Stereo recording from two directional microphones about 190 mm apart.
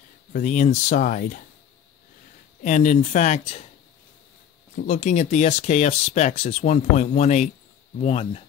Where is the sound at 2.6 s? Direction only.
40° left (ahead or behind).